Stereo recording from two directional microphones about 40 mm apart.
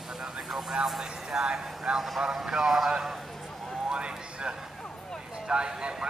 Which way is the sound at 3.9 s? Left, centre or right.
Right.